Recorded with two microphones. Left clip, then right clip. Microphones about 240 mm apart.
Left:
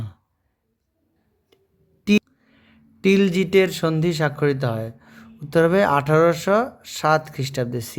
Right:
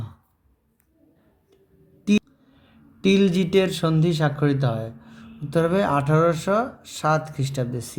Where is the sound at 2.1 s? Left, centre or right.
Left.